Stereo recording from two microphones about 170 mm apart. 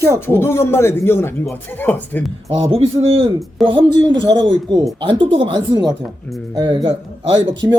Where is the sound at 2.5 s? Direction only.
35° right (ahead or behind).